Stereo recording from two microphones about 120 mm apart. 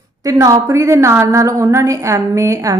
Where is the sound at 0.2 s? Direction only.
30° right (ahead or behind).